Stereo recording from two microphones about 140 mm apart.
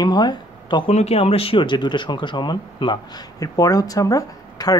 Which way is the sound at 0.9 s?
45° left (ahead or behind).